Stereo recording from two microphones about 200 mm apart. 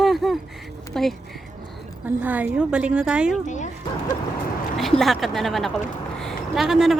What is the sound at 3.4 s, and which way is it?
Speech, 35° left (ahead or behind).